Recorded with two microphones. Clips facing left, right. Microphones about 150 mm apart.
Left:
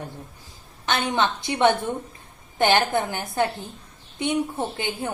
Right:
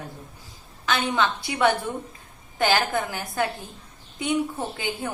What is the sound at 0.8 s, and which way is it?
A woman's voice, 25° left (ahead or behind).